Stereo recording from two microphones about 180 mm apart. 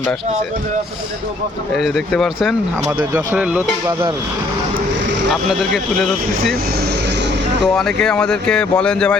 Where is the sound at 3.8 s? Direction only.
20° right (ahead or behind).